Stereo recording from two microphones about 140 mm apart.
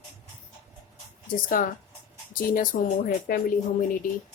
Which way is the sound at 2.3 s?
80° left.